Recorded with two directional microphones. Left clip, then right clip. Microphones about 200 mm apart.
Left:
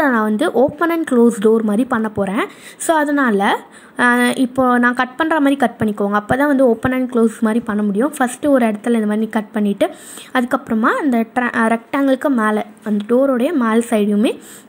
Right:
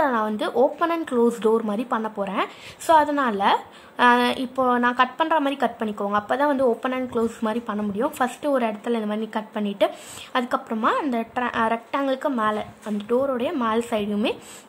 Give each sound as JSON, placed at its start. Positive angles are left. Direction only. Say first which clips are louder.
{"t": 0.0, "sound": "a woman's voice", "louder": "left 6 dB", "side_deg": 15}